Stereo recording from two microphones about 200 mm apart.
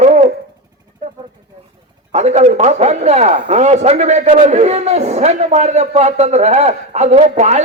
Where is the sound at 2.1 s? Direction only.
35° right (ahead or behind).